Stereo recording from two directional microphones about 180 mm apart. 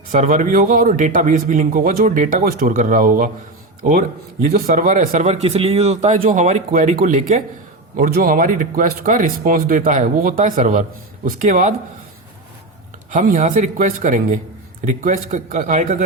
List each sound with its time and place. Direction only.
0.1 s a man's voice: 45° right (ahead or behind)
4.6 s a man's voice: 45° right (ahead or behind)
7.9 s a man's voice: 50° right (ahead or behind)
13.1 s a man's voice: 45° right (ahead or behind)